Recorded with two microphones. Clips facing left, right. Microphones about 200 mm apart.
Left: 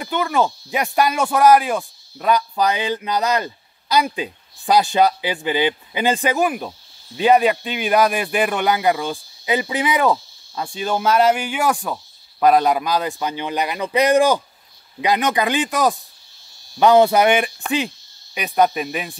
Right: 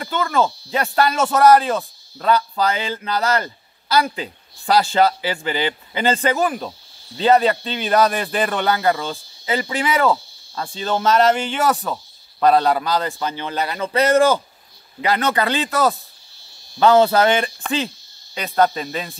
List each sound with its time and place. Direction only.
0.0 s speech: 15° left (ahead or behind)